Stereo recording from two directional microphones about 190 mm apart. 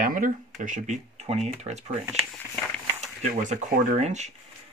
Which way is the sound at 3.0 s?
40° right (ahead or behind).